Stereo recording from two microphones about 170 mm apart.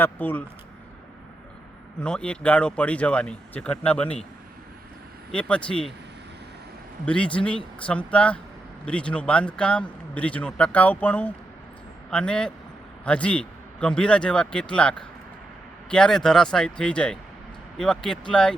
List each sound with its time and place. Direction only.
0.0 s a man's voice: 10° left (ahead or behind)
2.0 s a man's voice: 5° left (ahead or behind)
5.3 s a man's voice: 5° left (ahead or behind)
7.0 s a man's voice: 5° left (ahead or behind)